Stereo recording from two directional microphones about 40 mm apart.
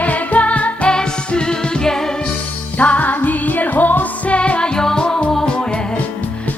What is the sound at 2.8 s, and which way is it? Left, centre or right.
Music, left.